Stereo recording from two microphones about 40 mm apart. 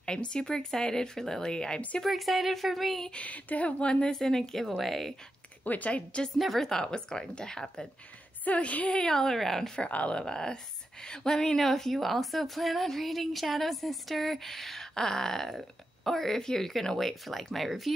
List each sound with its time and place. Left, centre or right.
0.0 s speech: left
2.0 s speech: centre
3.2 s a woman's voice: left
3.8 s speech: left
4.1 s a woman's voice: centre
5.6 s a woman's voice: left
6.3 s speech: centre
6.6 s speech: centre
8.5 s a woman's voice: left
9.1 s a woman's voice: centre
9.8 s a woman's voice: left
10.1 s a woman's voice: centre